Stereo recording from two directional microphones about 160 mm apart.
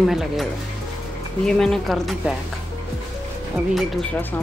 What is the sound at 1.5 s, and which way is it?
Speech, 5° left (ahead or behind).